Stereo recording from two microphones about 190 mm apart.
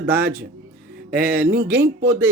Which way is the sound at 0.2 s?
60° right (ahead or behind).